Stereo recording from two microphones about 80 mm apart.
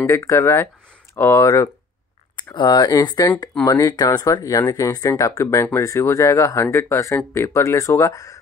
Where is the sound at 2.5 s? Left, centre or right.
Left.